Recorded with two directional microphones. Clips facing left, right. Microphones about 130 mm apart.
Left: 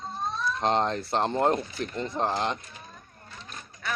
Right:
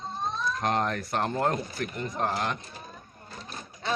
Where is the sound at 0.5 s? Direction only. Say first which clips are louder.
Left 4 dB; 25° left (ahead or behind).